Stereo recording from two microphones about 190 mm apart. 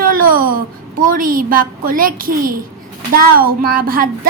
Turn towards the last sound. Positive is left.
turn(degrees=-50)  # may be behind; listen again after turning